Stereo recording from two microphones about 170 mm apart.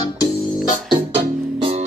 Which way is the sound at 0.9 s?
30° right (ahead or behind).